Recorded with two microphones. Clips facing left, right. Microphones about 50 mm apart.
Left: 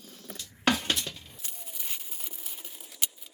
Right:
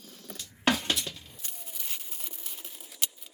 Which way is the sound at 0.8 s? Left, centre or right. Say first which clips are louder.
Even; left.